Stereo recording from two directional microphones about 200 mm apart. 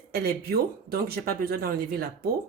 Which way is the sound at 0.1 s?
50° right (ahead or behind).